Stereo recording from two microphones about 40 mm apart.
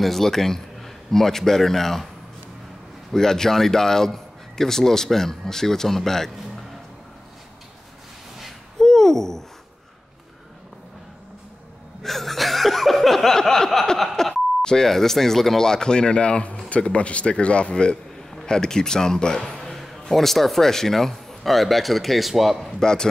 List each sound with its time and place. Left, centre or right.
0.0 s a man's voice: centre
3.1 s speech: centre
8.7 s hoot: centre
12.0 s a sound: centre
13.9 s speech: centre
19.5 s a sound: centre
19.8 s a man's voice: centre
22.8 s speech: centre